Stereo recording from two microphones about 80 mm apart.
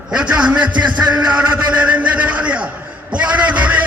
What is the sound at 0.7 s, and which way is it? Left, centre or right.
Music, right.